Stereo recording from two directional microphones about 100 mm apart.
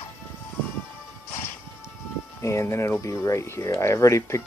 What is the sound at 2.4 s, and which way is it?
Speech, 30° left (ahead or behind).